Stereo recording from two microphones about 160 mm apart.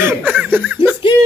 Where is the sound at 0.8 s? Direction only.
30° left (ahead or behind).